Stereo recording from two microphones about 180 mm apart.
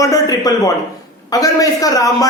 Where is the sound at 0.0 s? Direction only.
20° left (ahead or behind).